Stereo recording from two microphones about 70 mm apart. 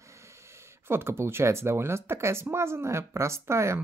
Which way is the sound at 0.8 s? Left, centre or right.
Right.